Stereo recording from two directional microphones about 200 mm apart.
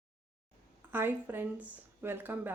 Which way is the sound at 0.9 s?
10° right (ahead or behind).